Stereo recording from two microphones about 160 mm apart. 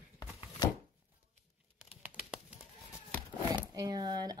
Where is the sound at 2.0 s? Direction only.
10° right (ahead or behind).